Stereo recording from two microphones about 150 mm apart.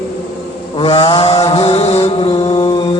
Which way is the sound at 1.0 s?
35° left (ahead or behind).